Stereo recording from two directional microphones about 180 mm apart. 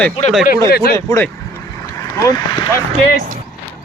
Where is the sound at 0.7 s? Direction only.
60° left (ahead or behind).